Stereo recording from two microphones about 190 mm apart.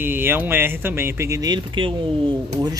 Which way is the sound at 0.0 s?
10° right (ahead or behind).